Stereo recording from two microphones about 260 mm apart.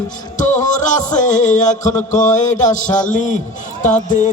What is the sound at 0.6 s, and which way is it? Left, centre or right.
A man's voice, left.